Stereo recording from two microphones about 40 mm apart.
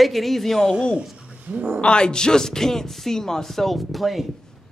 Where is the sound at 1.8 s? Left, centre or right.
Left; by 4.2 s centre.